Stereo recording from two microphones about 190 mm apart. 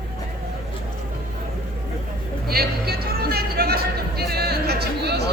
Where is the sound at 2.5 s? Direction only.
55° right (ahead or behind).